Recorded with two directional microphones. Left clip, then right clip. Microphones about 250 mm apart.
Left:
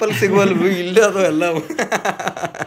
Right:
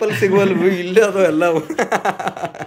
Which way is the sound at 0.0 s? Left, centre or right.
Centre.